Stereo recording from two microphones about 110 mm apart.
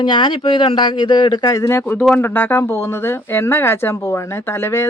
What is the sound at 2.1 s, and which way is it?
Speech, 20° left (ahead or behind).